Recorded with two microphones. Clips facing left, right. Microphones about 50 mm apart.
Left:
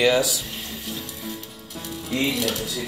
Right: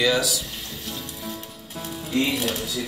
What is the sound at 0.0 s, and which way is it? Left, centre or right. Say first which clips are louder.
Speech: left 2 dB; left.